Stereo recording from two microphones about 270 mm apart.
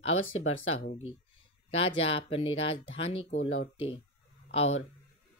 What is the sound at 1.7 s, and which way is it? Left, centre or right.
Speech, left.